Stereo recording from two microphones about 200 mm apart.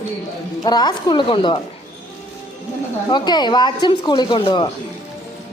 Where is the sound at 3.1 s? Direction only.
20° left (ahead or behind).